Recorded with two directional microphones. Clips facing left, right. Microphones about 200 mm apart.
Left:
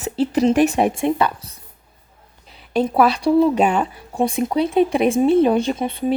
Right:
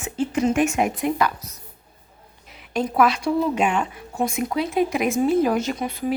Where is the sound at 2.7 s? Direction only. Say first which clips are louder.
Left 3 dB; 30° left (ahead or behind).